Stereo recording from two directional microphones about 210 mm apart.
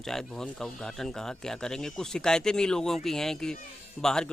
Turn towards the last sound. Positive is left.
turn(degrees=5)  # may be behind; listen again after turning